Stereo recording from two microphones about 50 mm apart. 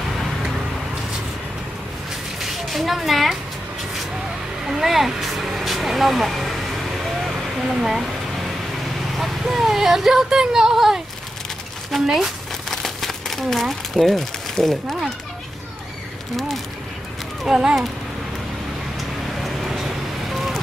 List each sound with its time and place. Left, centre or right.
2.4 s a sound: centre
4.6 s vehicle: centre
7.8 s speech: centre
9.1 s speech: centre
11.9 s a sound: centre
12.7 s crumpling: centre
17.5 s speech: centre
18.9 s vehicle: centre